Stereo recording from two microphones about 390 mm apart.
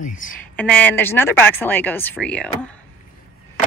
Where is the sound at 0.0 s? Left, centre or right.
Centre.